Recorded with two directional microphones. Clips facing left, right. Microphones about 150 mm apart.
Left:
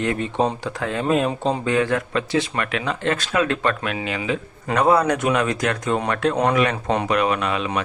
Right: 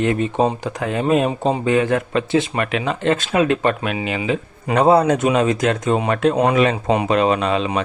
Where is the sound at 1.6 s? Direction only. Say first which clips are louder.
Right 4 dB; 20° right (ahead or behind).